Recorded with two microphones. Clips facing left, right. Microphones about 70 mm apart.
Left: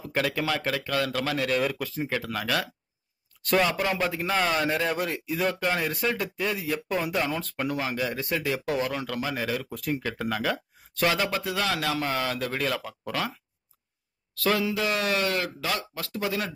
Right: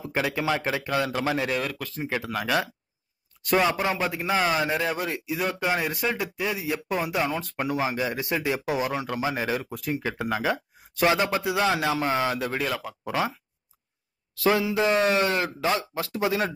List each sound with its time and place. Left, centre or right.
0.1 s speech: centre
1.6 s speech: centre
2.0 s a man's voice: centre
3.9 s a man's voice: centre
9.8 s speech: centre
10.1 s a man's voice: centre
14.3 s speech: centre